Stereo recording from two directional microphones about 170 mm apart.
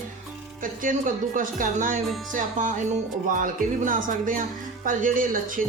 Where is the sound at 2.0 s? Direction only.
Centre (ahead or behind).